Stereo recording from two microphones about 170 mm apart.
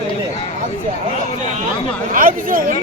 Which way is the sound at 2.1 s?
55° right (ahead or behind).